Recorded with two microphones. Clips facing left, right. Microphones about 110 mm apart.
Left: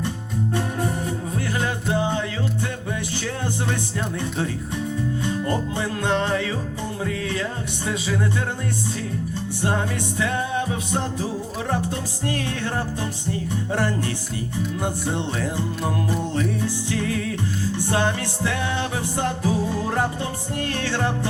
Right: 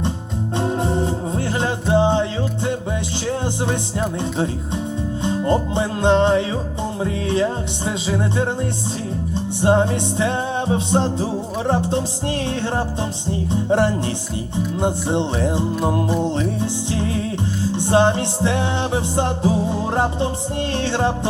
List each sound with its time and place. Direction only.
0.5 s music: 25° right (ahead or behind)
5.2 s music: 25° right (ahead or behind)